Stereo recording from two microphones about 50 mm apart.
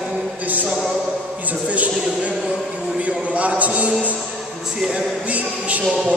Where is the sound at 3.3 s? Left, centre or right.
Right.